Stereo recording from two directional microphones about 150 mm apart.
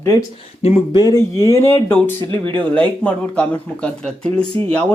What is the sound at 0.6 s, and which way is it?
Speech, 35° left (ahead or behind).